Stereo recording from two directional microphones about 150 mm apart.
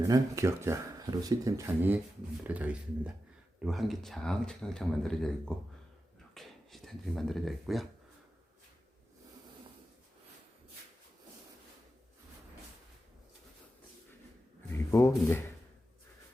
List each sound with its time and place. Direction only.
0.0 s speech: 20° right (ahead or behind); by 7.9 s centre (ahead or behind)
14.7 s speech: 20° left (ahead or behind)